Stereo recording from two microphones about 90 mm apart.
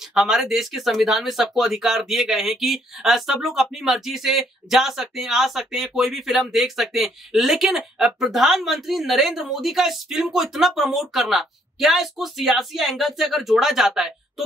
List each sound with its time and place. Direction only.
0.1 s speech: 5° right (ahead or behind)